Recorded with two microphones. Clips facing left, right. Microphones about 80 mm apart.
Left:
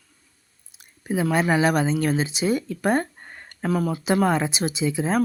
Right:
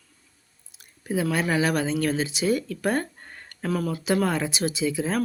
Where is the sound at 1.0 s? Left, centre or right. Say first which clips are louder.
Left 3 dB; left.